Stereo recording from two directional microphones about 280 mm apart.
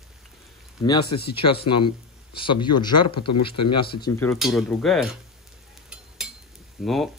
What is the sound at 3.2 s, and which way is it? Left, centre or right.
Speech, left.